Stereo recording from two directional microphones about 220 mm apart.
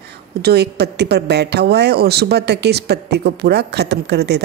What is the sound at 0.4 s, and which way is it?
Speech, 45° right (ahead or behind).